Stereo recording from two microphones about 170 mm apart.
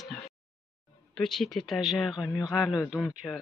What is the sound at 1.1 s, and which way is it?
Speech, centre (ahead or behind).